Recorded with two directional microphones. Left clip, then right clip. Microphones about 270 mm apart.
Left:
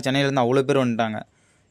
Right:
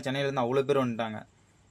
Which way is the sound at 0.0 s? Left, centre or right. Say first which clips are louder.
Left 8 dB; left.